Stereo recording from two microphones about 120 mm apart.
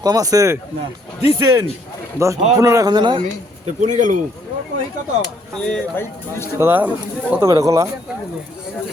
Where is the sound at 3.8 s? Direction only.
90° right.